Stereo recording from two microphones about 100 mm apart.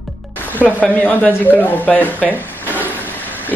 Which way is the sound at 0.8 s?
10° left (ahead or behind).